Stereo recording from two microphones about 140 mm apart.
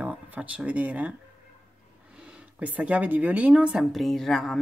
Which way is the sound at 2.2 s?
10° right (ahead or behind).